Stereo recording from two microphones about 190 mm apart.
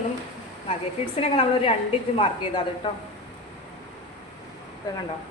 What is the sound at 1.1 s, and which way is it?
A woman's voice, 30° left (ahead or behind).